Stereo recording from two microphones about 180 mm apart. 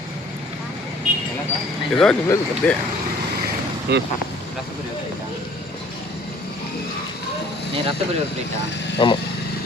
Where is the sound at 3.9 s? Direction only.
70° right (ahead or behind).